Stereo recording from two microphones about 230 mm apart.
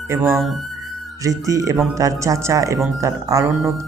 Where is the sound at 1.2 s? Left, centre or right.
Centre.